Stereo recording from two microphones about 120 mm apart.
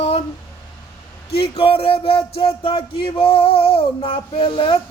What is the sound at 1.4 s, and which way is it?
Music, 50° left (ahead or behind).